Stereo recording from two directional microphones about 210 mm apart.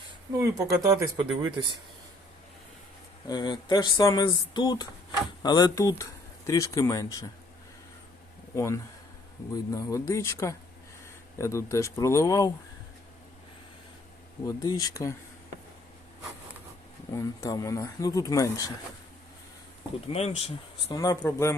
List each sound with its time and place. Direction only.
0.3 s speech: 15° right (ahead or behind)
3.2 s speech: 20° left (ahead or behind)
8.5 s speech: 15° left (ahead or behind)
14.4 s speech: 20° left (ahead or behind)
17.1 s speech: 15° left (ahead or behind)
20.1 s speech: 30° left (ahead or behind)
20.9 s speech: 15° left (ahead or behind)